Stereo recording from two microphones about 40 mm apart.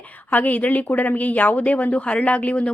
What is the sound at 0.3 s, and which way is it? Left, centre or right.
A woman's voice, left.